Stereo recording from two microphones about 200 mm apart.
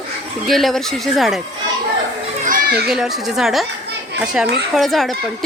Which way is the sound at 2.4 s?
45° right (ahead or behind).